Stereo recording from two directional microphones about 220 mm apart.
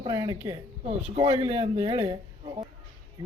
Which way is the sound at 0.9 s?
25° right (ahead or behind).